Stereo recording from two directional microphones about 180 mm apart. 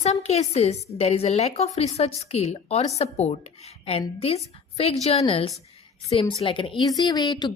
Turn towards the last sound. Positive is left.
turn(degrees=25)  # may be behind; listen again after turning